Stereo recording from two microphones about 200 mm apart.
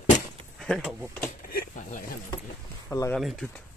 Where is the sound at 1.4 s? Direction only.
45° left (ahead or behind).